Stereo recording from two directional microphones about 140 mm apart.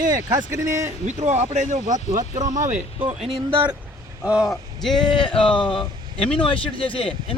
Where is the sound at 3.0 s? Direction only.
45° right (ahead or behind).